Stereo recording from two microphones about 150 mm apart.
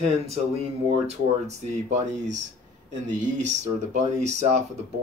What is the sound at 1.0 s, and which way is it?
Speech, 50° right (ahead or behind).